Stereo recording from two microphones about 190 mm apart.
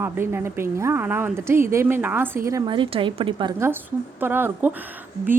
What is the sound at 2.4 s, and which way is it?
A woman's voice, 20° right (ahead or behind).